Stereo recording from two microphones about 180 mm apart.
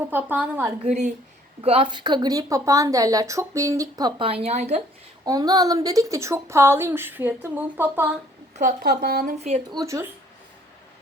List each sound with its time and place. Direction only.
0.0 s a woman's voice: 10° right (ahead or behind)
0.9 s a woman's voice: 40° right (ahead or behind)
1.6 s speech: 30° right (ahead or behind)
5.2 s a woman's voice: 20° right (ahead or behind)
8.5 s speech: 50° right (ahead or behind)
9.7 s a woman's voice: 15° right (ahead or behind)